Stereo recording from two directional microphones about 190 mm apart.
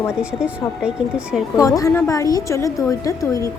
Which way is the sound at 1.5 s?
20° left (ahead or behind).